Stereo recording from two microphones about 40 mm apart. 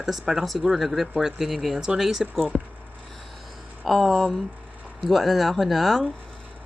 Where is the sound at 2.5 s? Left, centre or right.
Centre.